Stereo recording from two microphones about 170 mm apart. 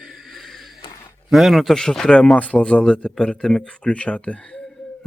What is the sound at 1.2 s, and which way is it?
Speech, centre (ahead or behind).